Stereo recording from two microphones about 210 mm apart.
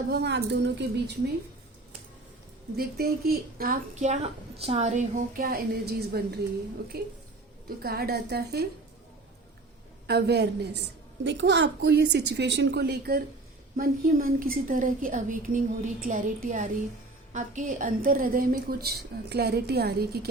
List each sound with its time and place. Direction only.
0.1 s a woman's voice: 50° right (ahead or behind)
2.7 s a woman's voice: 45° right (ahead or behind)
10.1 s a woman's voice: 50° right (ahead or behind)